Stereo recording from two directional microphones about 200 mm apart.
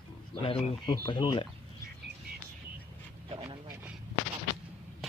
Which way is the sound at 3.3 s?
30° right (ahead or behind).